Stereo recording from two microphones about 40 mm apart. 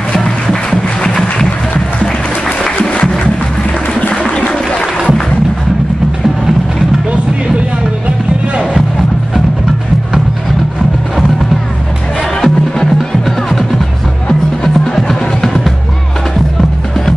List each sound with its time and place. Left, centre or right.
0.1 s music: centre
2.4 s music: centre
4.1 s a sound: centre
12.4 s music: centre